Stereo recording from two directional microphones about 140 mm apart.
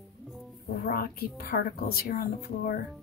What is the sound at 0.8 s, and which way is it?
A woman's voice, 90° left.